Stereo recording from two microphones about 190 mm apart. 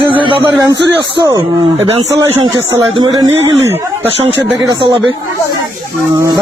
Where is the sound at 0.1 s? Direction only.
25° right (ahead or behind).